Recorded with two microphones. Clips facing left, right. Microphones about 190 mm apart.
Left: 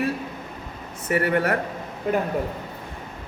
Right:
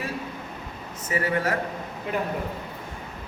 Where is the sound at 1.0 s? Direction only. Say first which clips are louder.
Left 4 dB; 60° left (ahead or behind).